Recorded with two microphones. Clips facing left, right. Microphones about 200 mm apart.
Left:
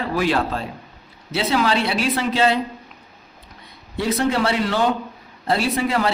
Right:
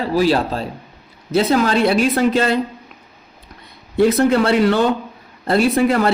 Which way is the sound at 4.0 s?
50° right (ahead or behind).